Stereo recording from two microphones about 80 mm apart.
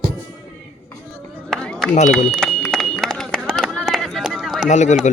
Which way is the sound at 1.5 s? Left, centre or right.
Centre.